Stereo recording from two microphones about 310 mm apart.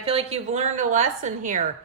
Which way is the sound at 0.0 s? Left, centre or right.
Centre.